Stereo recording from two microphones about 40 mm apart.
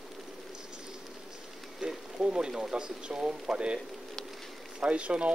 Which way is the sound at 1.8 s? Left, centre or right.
Centre.